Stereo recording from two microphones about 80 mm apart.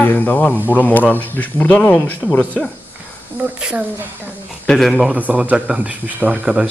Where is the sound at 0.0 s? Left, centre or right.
Left.